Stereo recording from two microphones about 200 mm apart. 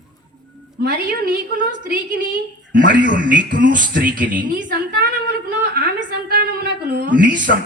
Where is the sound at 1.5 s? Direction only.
40° right (ahead or behind).